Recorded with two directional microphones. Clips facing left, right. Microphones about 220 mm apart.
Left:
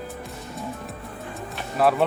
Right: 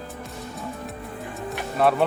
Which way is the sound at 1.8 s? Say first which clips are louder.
Even; centre (ahead or behind).